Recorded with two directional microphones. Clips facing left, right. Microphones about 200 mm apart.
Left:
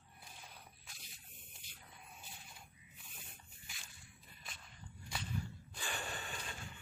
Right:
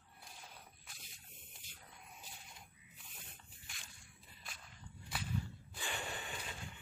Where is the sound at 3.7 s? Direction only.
Centre (ahead or behind).